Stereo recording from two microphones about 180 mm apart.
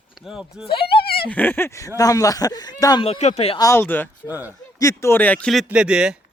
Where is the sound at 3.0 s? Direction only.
35° left (ahead or behind).